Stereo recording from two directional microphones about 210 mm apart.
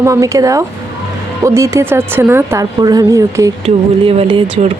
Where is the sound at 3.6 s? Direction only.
25° right (ahead or behind).